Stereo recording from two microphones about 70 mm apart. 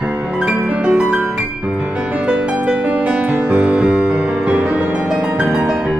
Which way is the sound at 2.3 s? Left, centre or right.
Centre.